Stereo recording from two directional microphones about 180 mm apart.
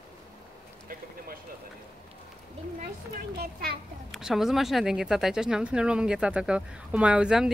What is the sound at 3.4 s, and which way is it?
Speech, 60° right (ahead or behind).